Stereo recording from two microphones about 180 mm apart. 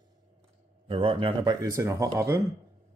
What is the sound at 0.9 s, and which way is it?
Speech, 30° right (ahead or behind).